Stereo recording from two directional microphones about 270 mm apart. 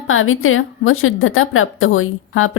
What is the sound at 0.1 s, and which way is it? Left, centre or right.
A woman's voice, left.